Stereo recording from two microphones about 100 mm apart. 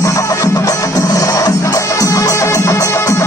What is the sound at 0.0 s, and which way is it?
Music, 30° left (ahead or behind).